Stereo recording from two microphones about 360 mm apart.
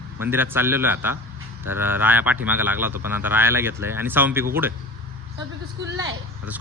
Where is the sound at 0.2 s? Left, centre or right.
Centre.